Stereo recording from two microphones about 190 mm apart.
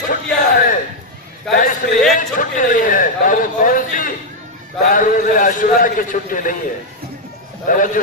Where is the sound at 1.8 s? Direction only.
50° left (ahead or behind).